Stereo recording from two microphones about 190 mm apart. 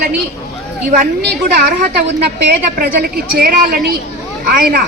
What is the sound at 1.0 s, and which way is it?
Speech, 55° right (ahead or behind).